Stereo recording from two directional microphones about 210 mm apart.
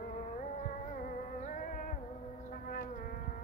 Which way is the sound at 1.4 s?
40° left (ahead or behind).